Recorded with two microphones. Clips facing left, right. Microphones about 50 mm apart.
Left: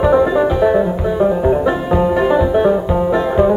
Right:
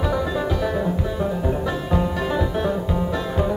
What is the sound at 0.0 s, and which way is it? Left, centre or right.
Music, left.